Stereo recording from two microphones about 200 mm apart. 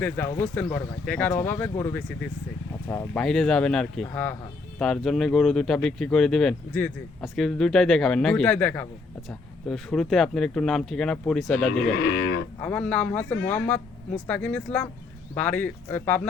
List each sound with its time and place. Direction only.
0.0 s speech: 10° left (ahead or behind)
11.9 s speech: 55° left (ahead or behind)
12.6 s speech: 5° left (ahead or behind)